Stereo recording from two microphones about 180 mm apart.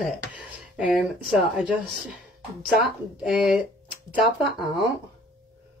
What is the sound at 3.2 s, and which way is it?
Speech, centre (ahead or behind).